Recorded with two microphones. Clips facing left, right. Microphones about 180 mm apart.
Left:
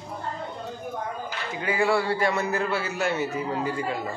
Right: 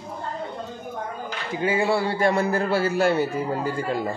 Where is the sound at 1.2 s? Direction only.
25° right (ahead or behind).